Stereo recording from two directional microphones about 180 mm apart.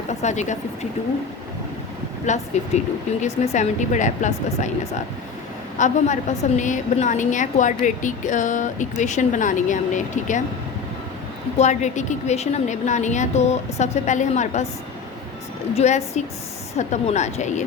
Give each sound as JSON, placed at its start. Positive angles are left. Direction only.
{"t": 0.1, "sound": "speech", "side_deg": 40}
{"t": 2.2, "sound": "a woman's voice", "side_deg": 40}
{"t": 5.7, "sound": "a woman's voice", "side_deg": 45}
{"t": 11.5, "sound": "a woman's voice", "side_deg": 40}
{"t": 15.7, "sound": "a woman's voice", "side_deg": 35}